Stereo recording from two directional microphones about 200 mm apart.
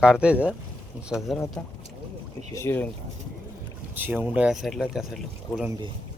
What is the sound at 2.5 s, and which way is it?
Speech, 10° left (ahead or behind).